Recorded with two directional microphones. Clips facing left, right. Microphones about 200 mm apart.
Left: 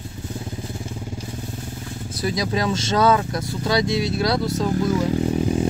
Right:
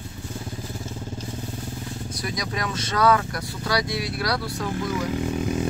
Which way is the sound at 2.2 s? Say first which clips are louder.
Left 8 dB; 30° left (ahead or behind).